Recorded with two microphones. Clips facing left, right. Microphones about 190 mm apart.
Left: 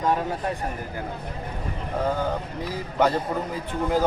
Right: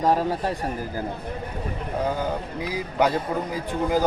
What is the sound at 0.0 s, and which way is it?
Speech, 35° right (ahead or behind).